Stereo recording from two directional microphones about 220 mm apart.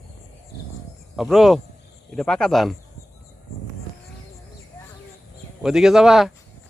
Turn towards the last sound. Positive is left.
turn(degrees=0)  # may be behind; listen again after turning